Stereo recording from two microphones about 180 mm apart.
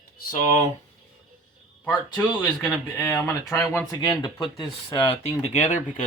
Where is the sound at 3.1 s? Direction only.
15° left (ahead or behind).